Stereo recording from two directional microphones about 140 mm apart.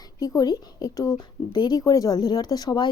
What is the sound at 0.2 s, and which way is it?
Speech, 25° left (ahead or behind).